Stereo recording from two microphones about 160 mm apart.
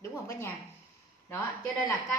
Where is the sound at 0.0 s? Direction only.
15° left (ahead or behind).